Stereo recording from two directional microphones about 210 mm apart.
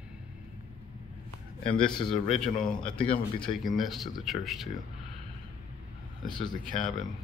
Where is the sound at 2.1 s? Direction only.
Centre (ahead or behind).